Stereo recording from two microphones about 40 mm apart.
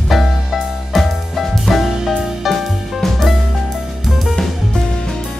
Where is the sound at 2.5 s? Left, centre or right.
Centre.